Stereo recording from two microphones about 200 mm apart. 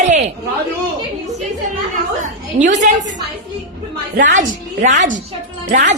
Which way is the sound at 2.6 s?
40° right (ahead or behind).